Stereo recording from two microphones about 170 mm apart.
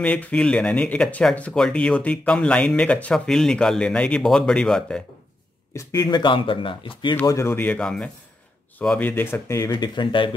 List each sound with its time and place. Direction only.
0.0 s speech: 5° left (ahead or behind)
5.8 s speech: 20° left (ahead or behind)
7.2 s speech: 15° left (ahead or behind)